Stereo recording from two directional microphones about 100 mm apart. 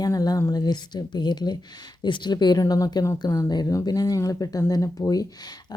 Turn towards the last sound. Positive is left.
turn(degrees=40)  # may be behind; listen again after turning